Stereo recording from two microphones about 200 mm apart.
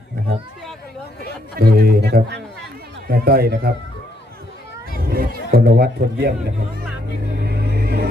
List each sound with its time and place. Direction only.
1.5 s speech: 50° right (ahead or behind)
5.0 s speech: 50° right (ahead or behind)
7.4 s vehicle: 55° right (ahead or behind)